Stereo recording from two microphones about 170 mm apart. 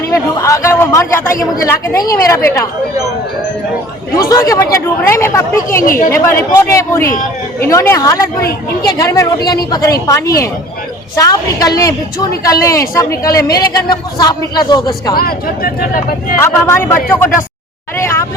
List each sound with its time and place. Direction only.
0.1 s a man's voice: 20° left (ahead or behind)
4.1 s a man's voice: 20° left (ahead or behind)
5.8 s speech: 55° left (ahead or behind)
6.1 s a man's voice: 15° left (ahead or behind)
15.1 s speech: 60° left (ahead or behind)
16.4 s a man's voice: 15° left (ahead or behind)
17.9 s a sound: 15° left (ahead or behind)